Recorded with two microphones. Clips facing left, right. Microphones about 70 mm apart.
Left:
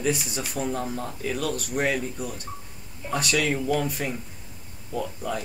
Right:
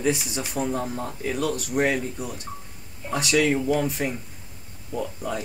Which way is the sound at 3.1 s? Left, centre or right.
Centre.